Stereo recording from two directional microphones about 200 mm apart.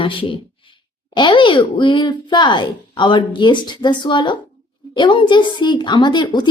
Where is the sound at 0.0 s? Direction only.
25° left (ahead or behind).